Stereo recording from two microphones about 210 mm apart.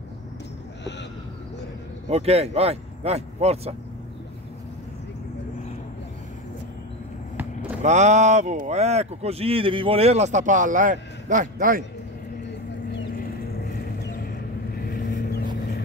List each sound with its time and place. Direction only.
2.0 s speech: 30° right (ahead or behind)
7.8 s speech: 35° right (ahead or behind)
13.7 s a sound: 45° left (ahead or behind)
14.8 s vehicle: 45° left (ahead or behind)